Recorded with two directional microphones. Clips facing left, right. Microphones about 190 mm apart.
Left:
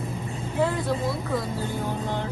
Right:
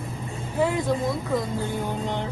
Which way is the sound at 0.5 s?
15° right (ahead or behind).